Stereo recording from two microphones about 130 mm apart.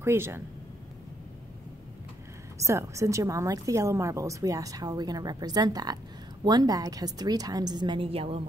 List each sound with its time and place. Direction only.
0.0 s a woman's voice: 20° right (ahead or behind)
2.6 s a woman's voice: 25° right (ahead or behind); by 8.4 s 45° right (ahead or behind)